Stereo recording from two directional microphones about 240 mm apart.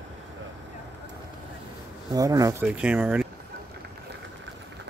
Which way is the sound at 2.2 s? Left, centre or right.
Centre.